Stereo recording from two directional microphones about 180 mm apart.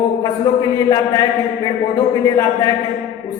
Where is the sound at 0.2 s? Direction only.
20° left (ahead or behind).